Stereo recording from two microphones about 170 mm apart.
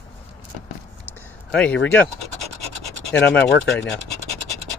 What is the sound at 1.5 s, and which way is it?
Speech, 5° left (ahead or behind).